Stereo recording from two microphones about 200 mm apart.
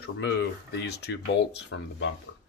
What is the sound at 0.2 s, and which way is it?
Speech, 60° left (ahead or behind).